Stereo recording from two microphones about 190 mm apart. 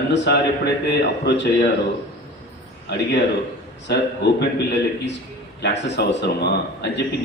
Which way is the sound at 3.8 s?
65° left (ahead or behind).